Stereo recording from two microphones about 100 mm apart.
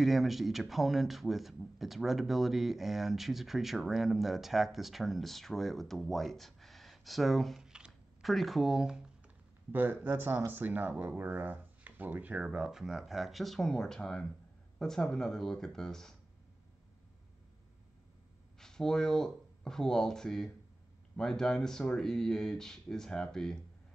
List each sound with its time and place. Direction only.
0.0 s speech: centre (ahead or behind)
9.7 s speech: 20° right (ahead or behind); by 16.2 s 5° left (ahead or behind)
18.6 s speech: 5° left (ahead or behind)